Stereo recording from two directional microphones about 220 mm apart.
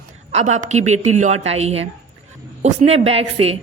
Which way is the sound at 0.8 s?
70° right (ahead or behind).